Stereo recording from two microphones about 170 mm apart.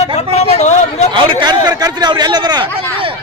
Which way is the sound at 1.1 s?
25° right (ahead or behind).